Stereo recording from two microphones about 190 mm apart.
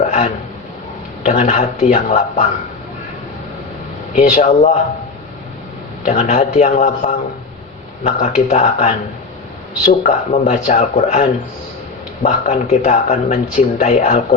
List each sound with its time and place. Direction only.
1.2 s speech: 35° left (ahead or behind)
4.1 s speech: 40° left (ahead or behind)
6.1 s speech: 40° left (ahead or behind)
10.0 s speech: 40° left (ahead or behind)